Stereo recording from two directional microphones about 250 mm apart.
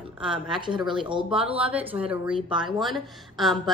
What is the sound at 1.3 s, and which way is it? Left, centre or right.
Speech, centre.